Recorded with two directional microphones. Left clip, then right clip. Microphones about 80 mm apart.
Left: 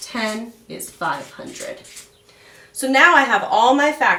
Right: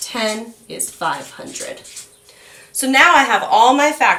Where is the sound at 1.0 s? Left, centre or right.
Right.